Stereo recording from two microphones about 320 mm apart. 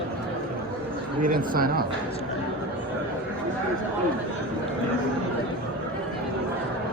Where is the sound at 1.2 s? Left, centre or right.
Right.